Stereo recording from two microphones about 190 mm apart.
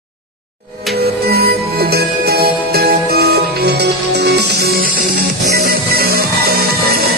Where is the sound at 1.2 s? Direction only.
55° right (ahead or behind).